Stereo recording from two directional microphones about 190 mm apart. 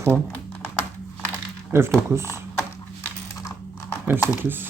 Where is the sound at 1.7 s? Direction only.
15° right (ahead or behind).